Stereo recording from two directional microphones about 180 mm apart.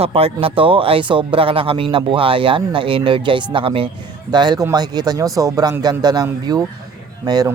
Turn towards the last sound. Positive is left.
turn(degrees=-25)  # may be behind; listen again after turning